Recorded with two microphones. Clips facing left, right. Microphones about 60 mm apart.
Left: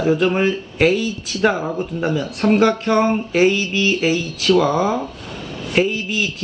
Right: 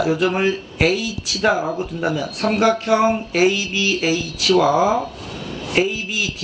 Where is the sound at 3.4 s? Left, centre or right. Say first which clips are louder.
Left 2 dB; right.